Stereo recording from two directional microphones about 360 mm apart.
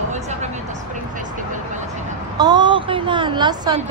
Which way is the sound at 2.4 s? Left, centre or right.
Centre.